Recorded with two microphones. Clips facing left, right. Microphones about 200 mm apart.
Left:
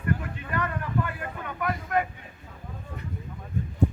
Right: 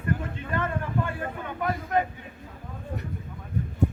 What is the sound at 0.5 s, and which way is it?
Vehicle, 25° right (ahead or behind).